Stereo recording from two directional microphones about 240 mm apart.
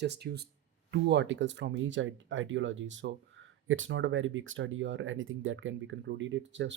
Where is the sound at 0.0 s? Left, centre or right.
Right.